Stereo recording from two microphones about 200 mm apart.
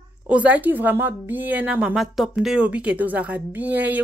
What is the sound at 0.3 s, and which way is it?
A woman's voice, 5° right (ahead or behind).